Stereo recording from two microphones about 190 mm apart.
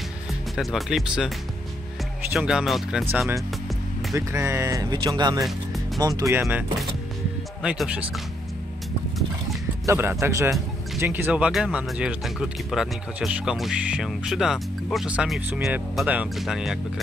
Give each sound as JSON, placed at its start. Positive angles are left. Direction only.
{"t": 0.6, "sound": "speech", "side_deg": 0}
{"t": 2.3, "sound": "speech", "side_deg": -5}
{"t": 4.1, "sound": "speech", "side_deg": -15}
{"t": 7.6, "sound": "speech", "side_deg": -5}
{"t": 9.8, "sound": "speech", "side_deg": -10}